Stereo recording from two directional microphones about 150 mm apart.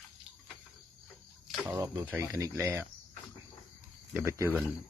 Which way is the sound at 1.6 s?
20° right (ahead or behind).